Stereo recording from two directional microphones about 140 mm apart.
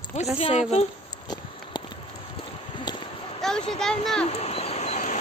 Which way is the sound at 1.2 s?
30° left (ahead or behind).